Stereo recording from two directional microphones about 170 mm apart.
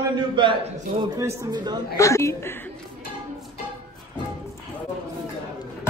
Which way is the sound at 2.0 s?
15° left (ahead or behind).